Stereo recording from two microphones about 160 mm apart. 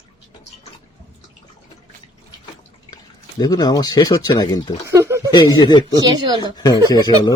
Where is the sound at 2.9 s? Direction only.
25° left (ahead or behind).